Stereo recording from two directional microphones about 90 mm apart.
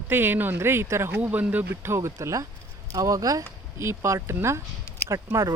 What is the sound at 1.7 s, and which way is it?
Speech, 30° right (ahead or behind).